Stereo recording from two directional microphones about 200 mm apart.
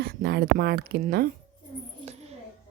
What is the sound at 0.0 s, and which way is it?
Speech, 50° right (ahead or behind).